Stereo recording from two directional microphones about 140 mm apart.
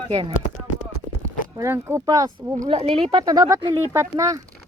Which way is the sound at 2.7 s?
45° right (ahead or behind).